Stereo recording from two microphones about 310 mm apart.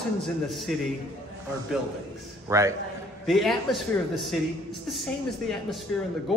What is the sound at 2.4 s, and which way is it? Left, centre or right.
Speech, centre.